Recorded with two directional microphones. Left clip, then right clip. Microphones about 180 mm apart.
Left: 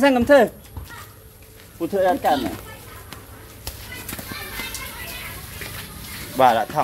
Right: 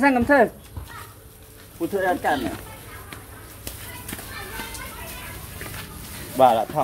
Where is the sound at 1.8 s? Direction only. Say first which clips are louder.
Left 3 dB; 20° left (ahead or behind).